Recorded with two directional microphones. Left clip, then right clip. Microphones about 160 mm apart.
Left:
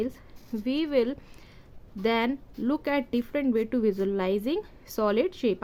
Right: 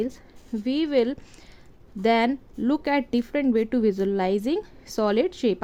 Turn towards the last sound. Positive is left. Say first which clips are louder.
# right 3 dB
turn(degrees=-20)  # may be behind; listen again after turning